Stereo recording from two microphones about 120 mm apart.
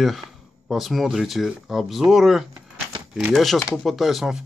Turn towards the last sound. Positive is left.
turn(degrees=0)  # may be behind; listen again after turning